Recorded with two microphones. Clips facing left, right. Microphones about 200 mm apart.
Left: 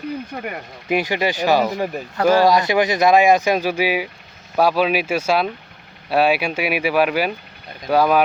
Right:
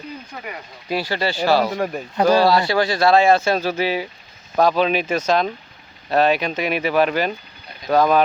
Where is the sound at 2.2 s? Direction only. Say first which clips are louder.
Even; 15° right (ahead or behind).